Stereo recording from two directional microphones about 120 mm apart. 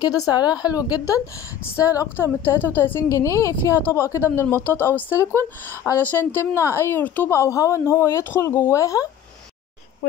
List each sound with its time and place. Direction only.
0.0 s a woman's voice: 30° left (ahead or behind)